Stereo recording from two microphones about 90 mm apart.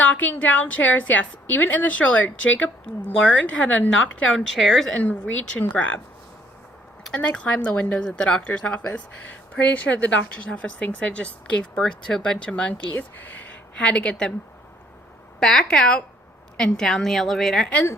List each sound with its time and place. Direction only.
0.0 s a woman's voice: 15° left (ahead or behind)
4.9 s speech: 15° left (ahead or behind)
7.0 s a woman's voice: 10° left (ahead or behind)
15.4 s a woman's voice: 5° left (ahead or behind)